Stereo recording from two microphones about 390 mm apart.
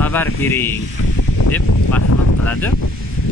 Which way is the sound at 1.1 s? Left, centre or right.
Left.